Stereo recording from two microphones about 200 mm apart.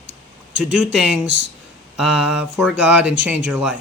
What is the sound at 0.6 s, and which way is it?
Speech, 5° right (ahead or behind).